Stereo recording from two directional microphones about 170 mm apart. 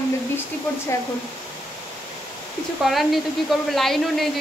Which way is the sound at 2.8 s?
Centre (ahead or behind).